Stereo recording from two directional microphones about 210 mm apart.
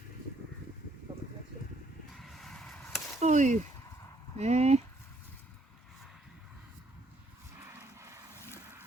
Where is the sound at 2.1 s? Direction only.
Centre (ahead or behind).